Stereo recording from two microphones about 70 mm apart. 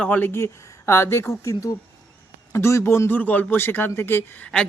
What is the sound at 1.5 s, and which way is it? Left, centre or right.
Speech, left.